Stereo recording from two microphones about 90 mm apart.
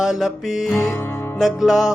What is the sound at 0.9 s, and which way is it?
Music, 30° left (ahead or behind).